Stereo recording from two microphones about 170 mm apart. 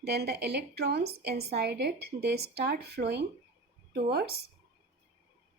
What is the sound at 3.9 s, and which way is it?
Speech, 70° right (ahead or behind).